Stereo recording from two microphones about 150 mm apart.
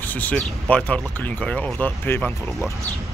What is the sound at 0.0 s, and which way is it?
Speech, 10° left (ahead or behind).